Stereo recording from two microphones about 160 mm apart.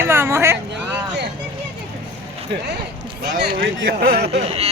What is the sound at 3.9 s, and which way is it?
Speech, 80° right.